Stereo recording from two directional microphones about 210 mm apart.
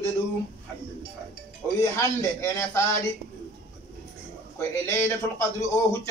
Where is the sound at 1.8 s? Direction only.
15° left (ahead or behind).